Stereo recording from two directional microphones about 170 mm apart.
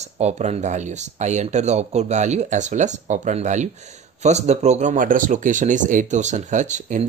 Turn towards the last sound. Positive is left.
turn(degrees=-45)  # may be behind; listen again after turning